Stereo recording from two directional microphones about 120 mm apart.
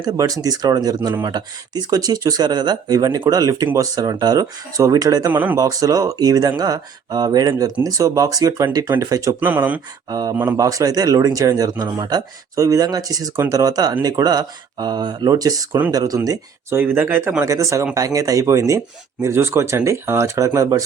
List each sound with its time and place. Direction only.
0.0 s speech: 30° right (ahead or behind)
5.3 s speech: 15° right (ahead or behind)
5.5 s speech: 30° right (ahead or behind)
9.4 s speech: 15° right (ahead or behind)
10.1 s speech: 30° right (ahead or behind)
16.7 s speech: 15° right (ahead or behind)